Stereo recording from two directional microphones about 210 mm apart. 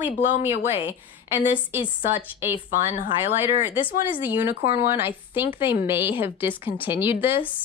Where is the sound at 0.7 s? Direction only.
10° right (ahead or behind).